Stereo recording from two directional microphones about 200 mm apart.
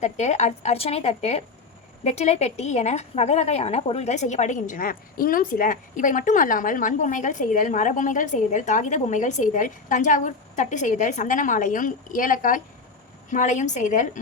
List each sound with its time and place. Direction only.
0.0 s a woman's voice: 35° left (ahead or behind)